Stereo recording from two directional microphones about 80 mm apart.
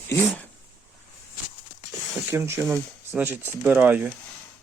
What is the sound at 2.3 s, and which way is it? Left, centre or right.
Speech, right.